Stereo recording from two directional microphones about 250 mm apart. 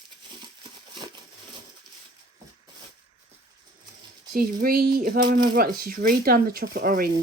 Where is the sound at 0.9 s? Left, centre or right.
Centre.